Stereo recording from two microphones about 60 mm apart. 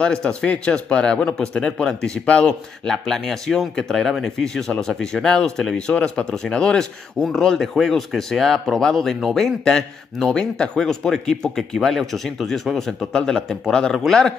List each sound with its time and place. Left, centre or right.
0.0 s speech: centre